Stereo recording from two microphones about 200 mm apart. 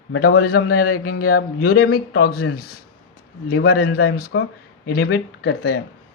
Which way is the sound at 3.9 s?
90° left.